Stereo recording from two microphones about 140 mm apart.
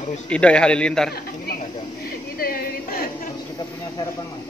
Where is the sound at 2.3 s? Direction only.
90° left.